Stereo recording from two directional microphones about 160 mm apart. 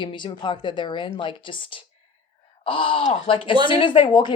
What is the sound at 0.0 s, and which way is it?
A woman's voice, 30° left (ahead or behind).